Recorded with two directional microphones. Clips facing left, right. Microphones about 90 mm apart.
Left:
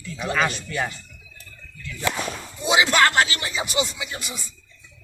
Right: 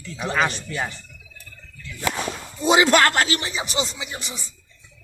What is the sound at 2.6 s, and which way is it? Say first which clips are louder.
Speech: right 2 dB; 40° right (ahead or behind).